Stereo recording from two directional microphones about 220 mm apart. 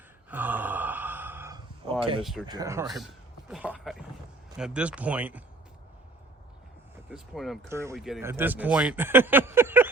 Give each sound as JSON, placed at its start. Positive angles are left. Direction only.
{"t": 0.3, "sound": "a sound", "side_deg": -10}
{"t": 2.0, "sound": "speech", "side_deg": -25}
{"t": 2.9, "sound": "a sound", "side_deg": 0}
{"t": 4.5, "sound": "speech", "side_deg": -5}
{"t": 7.1, "sound": "speech", "side_deg": 0}
{"t": 7.7, "sound": "speech", "side_deg": -10}
{"t": 7.9, "sound": "speech", "side_deg": 0}